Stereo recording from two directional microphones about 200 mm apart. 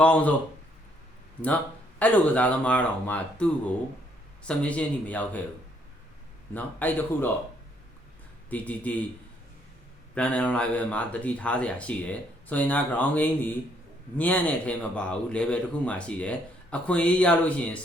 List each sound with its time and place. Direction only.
0.0 s speech: 5° left (ahead or behind)
2.0 s speech: 5° left (ahead or behind)
6.5 s speech: 10° left (ahead or behind)
8.4 s speech: 5° left (ahead or behind)
10.2 s speech: 5° left (ahead or behind)